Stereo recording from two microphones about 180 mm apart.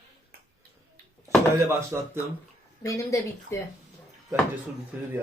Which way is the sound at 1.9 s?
10° right (ahead or behind).